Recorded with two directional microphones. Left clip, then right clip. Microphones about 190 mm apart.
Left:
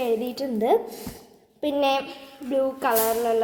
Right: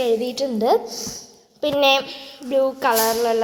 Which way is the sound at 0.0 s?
5° left (ahead or behind).